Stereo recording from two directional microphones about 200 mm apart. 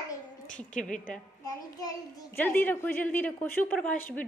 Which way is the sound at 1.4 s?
20° left (ahead or behind).